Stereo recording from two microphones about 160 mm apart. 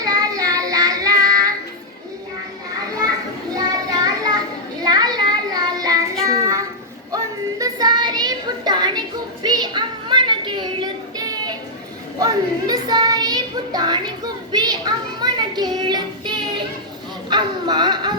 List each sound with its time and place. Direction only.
0.0 s child singing: 20° right (ahead or behind)
3.5 s children playing: 25° right (ahead or behind)
6.2 s child singing: 20° right (ahead or behind)
9.4 s a sound: 25° right (ahead or behind)
12.2 s child singing: 25° right (ahead or behind)
17.2 s dog: 25° right (ahead or behind)